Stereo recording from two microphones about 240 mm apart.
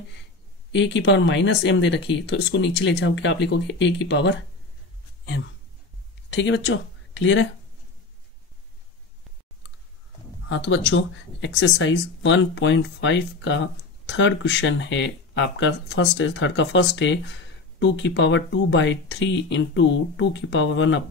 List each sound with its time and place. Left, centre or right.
0.7 s speech: left
6.3 s speech: left
10.5 s speech: left